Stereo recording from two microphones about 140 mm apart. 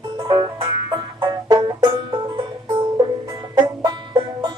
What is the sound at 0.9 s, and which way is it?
Banjo, 30° right (ahead or behind).